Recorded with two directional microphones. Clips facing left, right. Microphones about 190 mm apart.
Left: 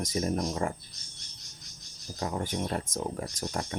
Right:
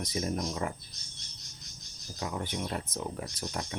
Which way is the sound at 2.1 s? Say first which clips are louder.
Left 3 dB; 45° left (ahead or behind).